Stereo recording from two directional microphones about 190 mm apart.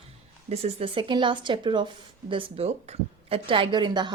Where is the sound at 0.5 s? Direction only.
30° right (ahead or behind).